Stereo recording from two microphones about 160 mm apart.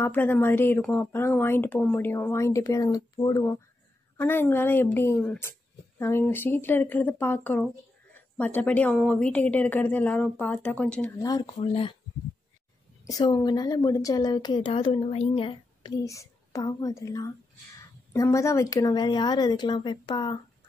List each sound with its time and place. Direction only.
0.0 s a woman's voice: 15° left (ahead or behind)
11.1 s a woman's voice: 25° left (ahead or behind)
11.6 s speech: 35° left (ahead or behind)
13.0 s a woman's voice: 25° left (ahead or behind)
16.0 s a woman's voice: 20° left (ahead or behind)